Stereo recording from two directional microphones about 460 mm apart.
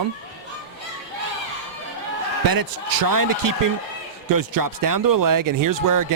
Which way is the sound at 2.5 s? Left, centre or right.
Right.